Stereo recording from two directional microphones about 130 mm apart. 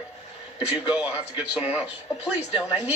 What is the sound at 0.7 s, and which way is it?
A man's voice, 10° right (ahead or behind).